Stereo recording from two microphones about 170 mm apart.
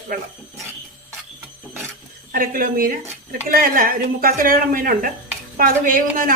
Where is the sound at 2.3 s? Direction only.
60° right (ahead or behind).